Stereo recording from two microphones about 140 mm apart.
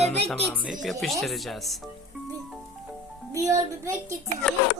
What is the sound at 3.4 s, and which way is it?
Speech, 20° right (ahead or behind).